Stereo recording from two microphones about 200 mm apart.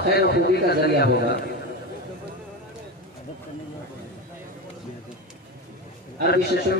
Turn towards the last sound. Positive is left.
turn(degrees=55)  # may be behind; listen again after turning